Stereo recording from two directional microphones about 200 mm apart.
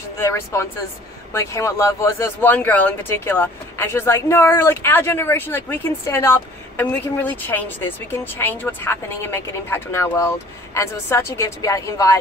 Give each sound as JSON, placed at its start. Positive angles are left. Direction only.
{"t": 0.2, "sound": "speech", "side_deg": 15}